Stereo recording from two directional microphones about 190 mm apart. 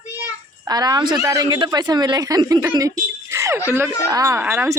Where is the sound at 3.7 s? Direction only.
10° right (ahead or behind).